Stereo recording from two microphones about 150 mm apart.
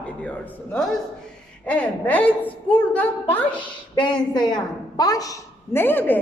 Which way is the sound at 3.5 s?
30° left (ahead or behind).